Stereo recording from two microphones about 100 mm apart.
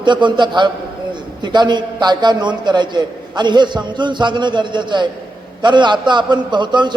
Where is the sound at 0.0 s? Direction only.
50° right (ahead or behind).